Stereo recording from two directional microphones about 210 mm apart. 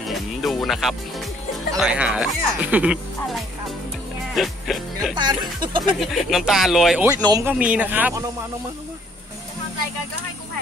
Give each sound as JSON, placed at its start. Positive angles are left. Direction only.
{"t": 0.0, "sound": "music", "side_deg": 0}
{"t": 1.8, "sound": "speech", "side_deg": -5}
{"t": 4.4, "sound": "speech", "side_deg": 0}
{"t": 5.1, "sound": "speech", "side_deg": -20}
{"t": 5.9, "sound": "speech", "side_deg": 0}
{"t": 7.2, "sound": "speech", "side_deg": -15}
{"t": 7.5, "sound": "speech", "side_deg": -5}